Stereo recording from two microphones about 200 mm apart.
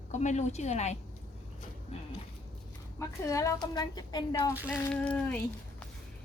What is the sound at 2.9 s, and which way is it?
A woman's voice, 15° left (ahead or behind).